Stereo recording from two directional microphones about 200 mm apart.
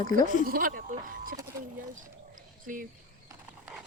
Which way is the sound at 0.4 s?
45° right (ahead or behind).